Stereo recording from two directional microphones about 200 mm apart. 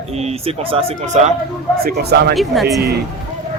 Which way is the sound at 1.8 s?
55° right (ahead or behind).